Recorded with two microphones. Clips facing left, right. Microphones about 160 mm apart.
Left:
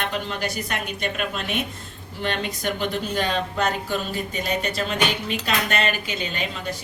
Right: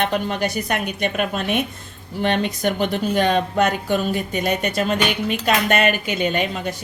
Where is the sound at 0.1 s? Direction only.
50° right (ahead or behind).